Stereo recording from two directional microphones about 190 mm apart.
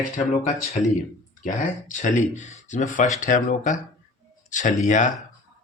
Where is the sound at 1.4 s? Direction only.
45° left (ahead or behind).